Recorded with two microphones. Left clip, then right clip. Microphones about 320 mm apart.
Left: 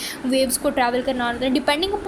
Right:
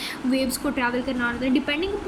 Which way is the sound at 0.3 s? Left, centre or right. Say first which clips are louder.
Left 7 dB; centre.